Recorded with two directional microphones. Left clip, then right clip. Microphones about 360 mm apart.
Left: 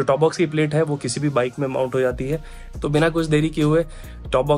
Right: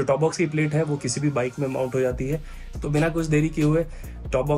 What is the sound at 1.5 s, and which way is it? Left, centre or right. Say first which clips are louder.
Speech: left 4 dB; left.